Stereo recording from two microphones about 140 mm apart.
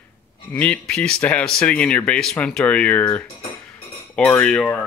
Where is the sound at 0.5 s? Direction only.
10° left (ahead or behind).